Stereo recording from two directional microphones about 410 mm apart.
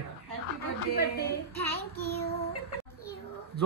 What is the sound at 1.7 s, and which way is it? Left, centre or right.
Child singing, left.